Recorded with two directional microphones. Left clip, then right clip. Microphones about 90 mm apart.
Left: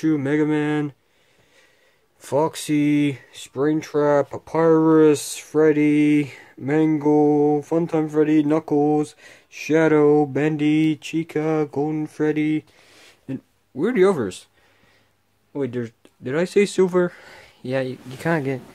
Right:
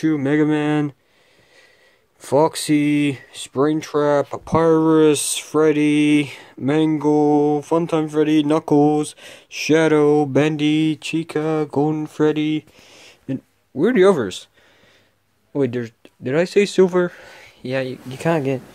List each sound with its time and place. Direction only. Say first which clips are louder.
0.0 s speech: right 2 dB; 20° right (ahead or behind)
2.2 s speech: right 5 dB; 30° right (ahead or behind); by 10.8 s 55° right (ahead or behind)
10.8 s speech: right 1 dB; 45° right (ahead or behind)
12.9 s a sound: right 4 dB; 25° right (ahead or behind)
15.5 s speech: right 5 dB; 45° right (ahead or behind)
16.3 s speech: right 2 dB; 25° right (ahead or behind)